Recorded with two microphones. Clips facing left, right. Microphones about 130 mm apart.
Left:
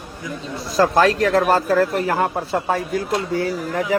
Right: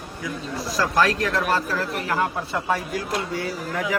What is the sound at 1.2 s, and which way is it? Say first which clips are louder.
Speech: left 7 dB; 45° left (ahead or behind).